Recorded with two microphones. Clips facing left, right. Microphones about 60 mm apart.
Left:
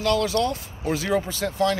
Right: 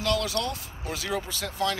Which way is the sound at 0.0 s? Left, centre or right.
Centre.